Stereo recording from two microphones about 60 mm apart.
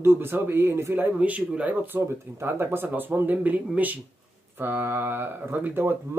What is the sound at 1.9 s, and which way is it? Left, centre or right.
Speech, right.